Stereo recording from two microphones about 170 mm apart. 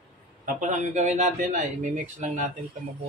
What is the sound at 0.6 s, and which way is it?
Speech, 45° right (ahead or behind).